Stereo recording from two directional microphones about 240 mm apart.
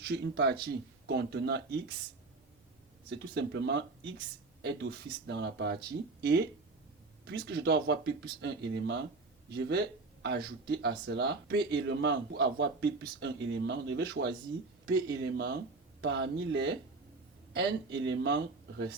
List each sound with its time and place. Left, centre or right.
0.0 s speech: right
3.1 s speech: right